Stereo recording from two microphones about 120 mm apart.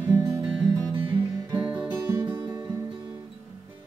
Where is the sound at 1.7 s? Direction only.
10° right (ahead or behind).